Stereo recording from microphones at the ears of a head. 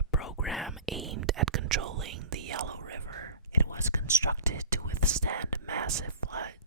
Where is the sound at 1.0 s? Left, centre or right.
Right.